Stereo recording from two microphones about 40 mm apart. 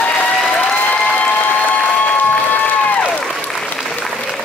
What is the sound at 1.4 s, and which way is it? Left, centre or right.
Applause, left.